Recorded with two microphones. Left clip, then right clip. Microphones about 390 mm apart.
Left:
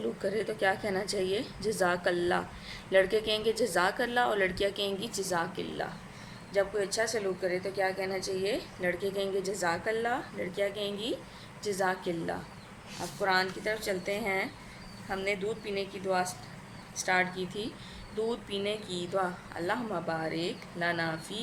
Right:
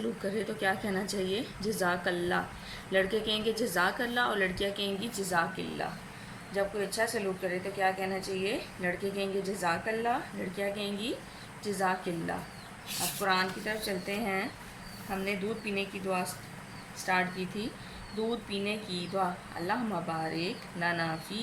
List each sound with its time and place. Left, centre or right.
0.3 s a woman's voice: centre